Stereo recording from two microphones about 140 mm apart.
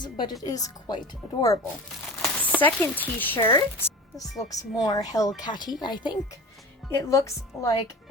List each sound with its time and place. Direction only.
0.0 s speech: 35° left (ahead or behind)
2.1 s speech: 5° left (ahead or behind); by 7.7 s 20° left (ahead or behind)